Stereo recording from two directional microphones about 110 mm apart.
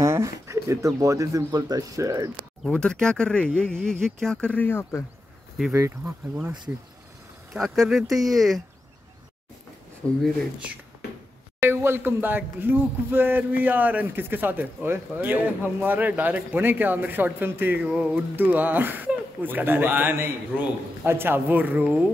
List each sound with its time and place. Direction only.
0.0 s speech: 30° right (ahead or behind)
2.6 s speech: 5° left (ahead or behind)
5.7 s speech: 20° right (ahead or behind)
7.5 s speech: centre (ahead or behind)
10.0 s speech: 10° left (ahead or behind)
11.6 s speech: 20° right (ahead or behind)